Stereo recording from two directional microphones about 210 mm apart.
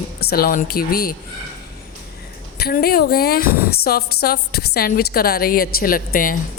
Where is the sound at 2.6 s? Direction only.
45° left (ahead or behind).